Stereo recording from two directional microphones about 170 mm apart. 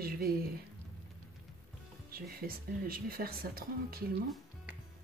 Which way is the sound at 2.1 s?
60° right (ahead or behind).